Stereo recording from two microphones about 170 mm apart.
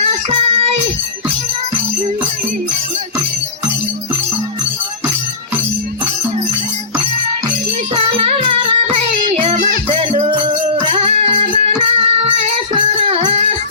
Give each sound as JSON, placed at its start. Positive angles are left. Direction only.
{"t": 7.9, "sound": "music", "side_deg": -35}